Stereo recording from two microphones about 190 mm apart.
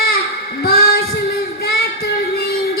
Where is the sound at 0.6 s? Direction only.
50° left (ahead or behind).